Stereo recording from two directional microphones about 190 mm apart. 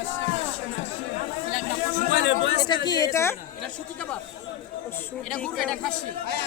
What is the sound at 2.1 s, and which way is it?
Speech, 70° left (ahead or behind).